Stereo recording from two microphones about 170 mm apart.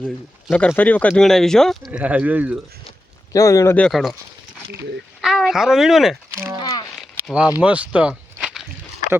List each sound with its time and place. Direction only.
0.0 s speech: 5° right (ahead or behind)
0.6 s speech: 10° left (ahead or behind); by 2.6 s 10° right (ahead or behind)
3.3 s speech: 20° left (ahead or behind)
3.8 s speech: centre (ahead or behind)
5.2 s speech: centre (ahead or behind)
6.3 s speech: 15° right (ahead or behind)
6.6 s a sound: 25° left (ahead or behind)
7.0 s a sound: 5° right (ahead or behind)
7.6 s speech: 10° right (ahead or behind)